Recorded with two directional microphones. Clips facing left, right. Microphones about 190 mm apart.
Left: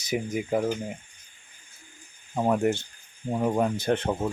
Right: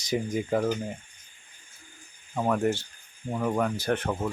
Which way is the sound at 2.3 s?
20° left (ahead or behind).